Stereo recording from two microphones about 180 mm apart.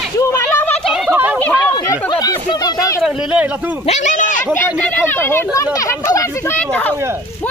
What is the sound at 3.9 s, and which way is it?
Speech, 40° left (ahead or behind).